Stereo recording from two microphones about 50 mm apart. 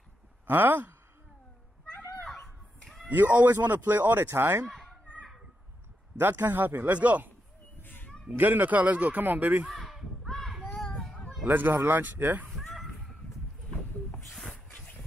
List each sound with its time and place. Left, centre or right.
0.5 s speech: right
2.2 s a sound: centre
3.1 s speech: right
4.3 s speech: right
4.6 s children playing: centre
6.1 s speech: right
7.8 s cat: left
8.4 s speech: right
9.8 s a sound: centre
11.4 s speech: right
14.7 s vehicle: left